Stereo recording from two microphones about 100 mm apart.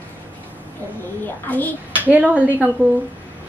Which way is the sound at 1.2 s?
15° left (ahead or behind).